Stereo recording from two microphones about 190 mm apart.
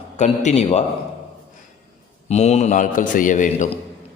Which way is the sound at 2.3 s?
35° left (ahead or behind).